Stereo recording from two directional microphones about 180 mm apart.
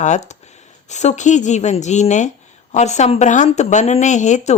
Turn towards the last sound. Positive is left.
turn(degrees=40)  # may be behind; listen again after turning